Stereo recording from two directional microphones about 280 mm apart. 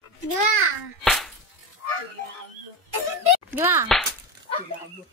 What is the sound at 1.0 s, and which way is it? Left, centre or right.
Music, centre.